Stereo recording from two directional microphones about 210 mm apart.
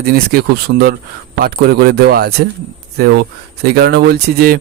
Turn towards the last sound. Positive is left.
turn(degrees=-50)  # may be behind; listen again after turning